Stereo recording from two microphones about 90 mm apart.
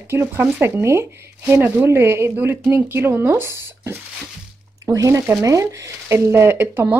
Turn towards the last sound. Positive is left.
turn(degrees=-25)  # may be behind; listen again after turning